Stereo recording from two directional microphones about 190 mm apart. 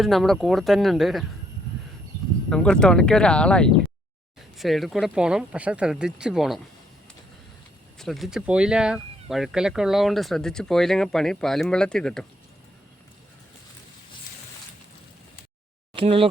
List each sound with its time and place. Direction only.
0.0 s speech: centre (ahead or behind)
2.5 s speech: 5° left (ahead or behind)
7.9 s speech: centre (ahead or behind)
16.0 s speech: 30° right (ahead or behind)